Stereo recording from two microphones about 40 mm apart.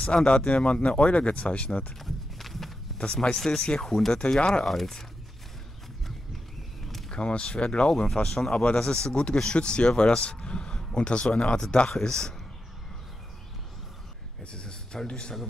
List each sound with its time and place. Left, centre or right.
0.0 s speech: left
2.0 s a sound: centre
3.0 s speech: left
4.4 s speech: left
4.6 s speech: centre
7.2 s speech: left
14.4 s speech: left